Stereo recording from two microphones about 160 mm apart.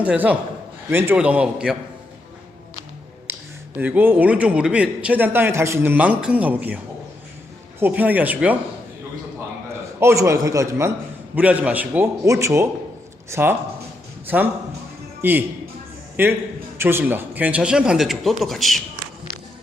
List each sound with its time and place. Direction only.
0.0 s speech: 10° right (ahead or behind)
3.3 s a sound: 15° right (ahead or behind)
3.8 s speech: 10° right (ahead or behind)
7.8 s speech: 10° right (ahead or behind)
10.0 s a man's voice: 20° right (ahead or behind); by 18.8 s centre (ahead or behind)